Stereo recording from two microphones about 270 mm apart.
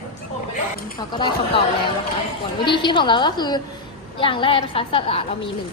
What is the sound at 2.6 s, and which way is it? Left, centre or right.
A woman's voice, centre.